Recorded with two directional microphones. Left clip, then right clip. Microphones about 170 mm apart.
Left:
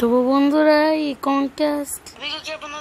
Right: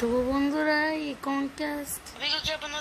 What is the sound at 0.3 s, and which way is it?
Female singing, 70° left (ahead or behind).